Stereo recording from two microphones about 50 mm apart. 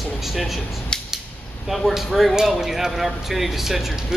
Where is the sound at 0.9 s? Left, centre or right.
Centre.